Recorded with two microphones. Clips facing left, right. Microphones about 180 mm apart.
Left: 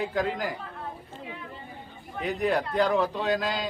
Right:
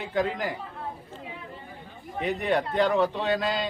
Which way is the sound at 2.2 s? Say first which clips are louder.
Even; centre (ahead or behind).